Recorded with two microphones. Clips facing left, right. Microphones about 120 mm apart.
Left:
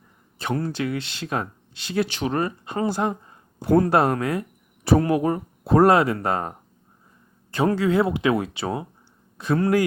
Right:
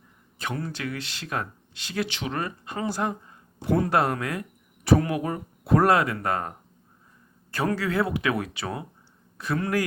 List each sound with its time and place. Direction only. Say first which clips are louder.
0.3 s speech: left 6 dB; 35° left (ahead or behind)
2.0 s speech: left 6 dB; 40° left (ahead or behind)
3.6 s speech: left 5 dB; 40° left (ahead or behind)
7.5 s speech: left 5 dB; 25° left (ahead or behind)